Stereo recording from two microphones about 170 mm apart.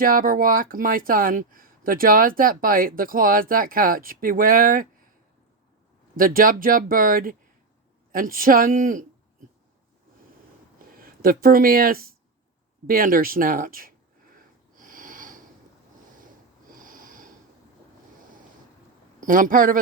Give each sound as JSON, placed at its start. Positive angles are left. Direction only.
{"t": 0.0, "sound": "speech", "side_deg": -55}
{"t": 6.1, "sound": "speech", "side_deg": -55}
{"t": 11.0, "sound": "speech", "side_deg": -60}
{"t": 14.8, "sound": "sniff", "side_deg": -50}
{"t": 16.7, "sound": "a sound", "side_deg": -50}
{"t": 19.2, "sound": "speech", "side_deg": -55}